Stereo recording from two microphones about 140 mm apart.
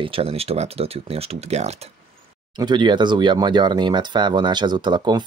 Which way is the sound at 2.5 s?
30° right (ahead or behind).